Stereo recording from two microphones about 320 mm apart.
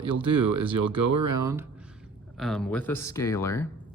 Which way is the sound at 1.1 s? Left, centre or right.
Right.